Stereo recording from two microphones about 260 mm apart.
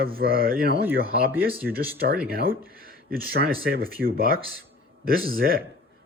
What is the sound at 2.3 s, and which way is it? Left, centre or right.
Speech, right.